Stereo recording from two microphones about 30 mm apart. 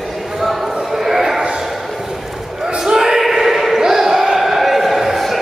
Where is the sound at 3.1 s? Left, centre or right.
Centre.